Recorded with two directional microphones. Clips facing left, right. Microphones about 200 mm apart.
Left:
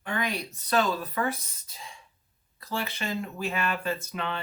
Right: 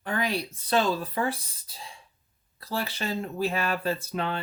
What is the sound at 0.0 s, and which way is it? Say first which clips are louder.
Speech: right 2 dB; 35° right (ahead or behind).